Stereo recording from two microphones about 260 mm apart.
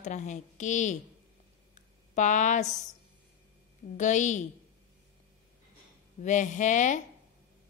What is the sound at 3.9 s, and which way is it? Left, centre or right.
Speech, left.